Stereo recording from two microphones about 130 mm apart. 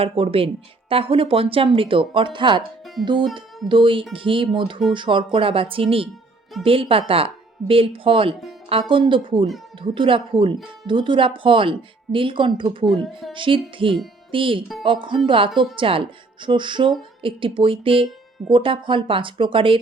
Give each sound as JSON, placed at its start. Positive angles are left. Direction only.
{"t": 0.0, "sound": "speech", "side_deg": -45}
{"t": 12.8, "sound": "speech", "side_deg": 0}
{"t": 13.3, "sound": "speech", "side_deg": -40}